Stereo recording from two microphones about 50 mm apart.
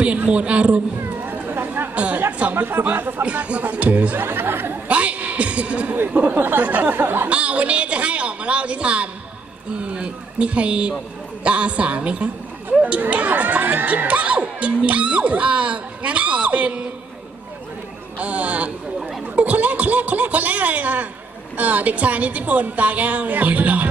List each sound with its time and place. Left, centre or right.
0.0 s a man's voice: right
1.2 s a sound: right
2.0 s speech: right
2.5 s a woman's voice: right
4.2 s speech: right
4.8 s a sound: right
6.0 s a woman's voice: right
7.0 s speech: right
7.2 s a woman's voice: right
12.6 s speech: right
18.2 s speech: right
18.9 s speech: centre
19.3 s a woman's voice: right